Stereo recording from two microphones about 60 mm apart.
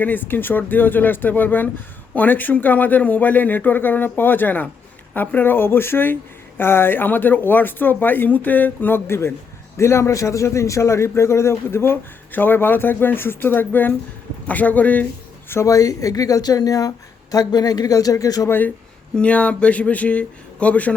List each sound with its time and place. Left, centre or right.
0.0 s speech: left
9.0 s a man's voice: left
15.6 s speech: left
18.4 s speech: left
19.1 s speech: left